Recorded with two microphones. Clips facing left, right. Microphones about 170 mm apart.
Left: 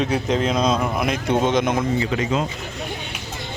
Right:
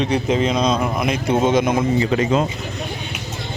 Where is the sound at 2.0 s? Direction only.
40° right (ahead or behind).